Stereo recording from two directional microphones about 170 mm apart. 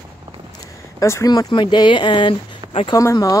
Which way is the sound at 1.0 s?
20° left (ahead or behind).